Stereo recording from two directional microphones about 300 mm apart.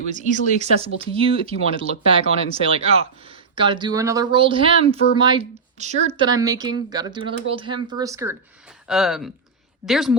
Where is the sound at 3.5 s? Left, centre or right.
Centre.